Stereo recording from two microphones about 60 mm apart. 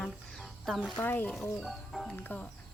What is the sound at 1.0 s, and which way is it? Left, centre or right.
Speech, left.